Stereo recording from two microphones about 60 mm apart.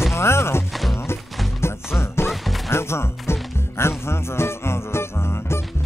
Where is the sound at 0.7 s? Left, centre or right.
Centre.